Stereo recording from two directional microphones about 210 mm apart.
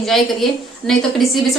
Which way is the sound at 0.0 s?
Centre (ahead or behind).